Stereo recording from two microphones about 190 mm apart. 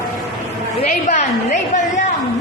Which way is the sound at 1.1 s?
40° left (ahead or behind).